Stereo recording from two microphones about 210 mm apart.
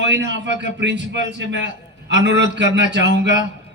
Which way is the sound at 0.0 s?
55° right (ahead or behind).